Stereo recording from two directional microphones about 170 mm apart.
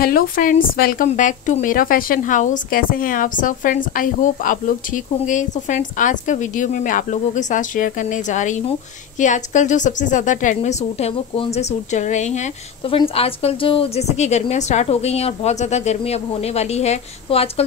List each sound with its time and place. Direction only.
0.0 s a woman's voice: 55° left (ahead or behind)
1.0 s a woman's voice: 45° left (ahead or behind)